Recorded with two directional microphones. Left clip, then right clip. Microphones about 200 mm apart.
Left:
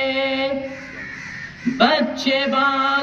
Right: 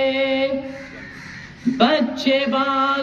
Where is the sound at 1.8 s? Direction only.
35° right (ahead or behind).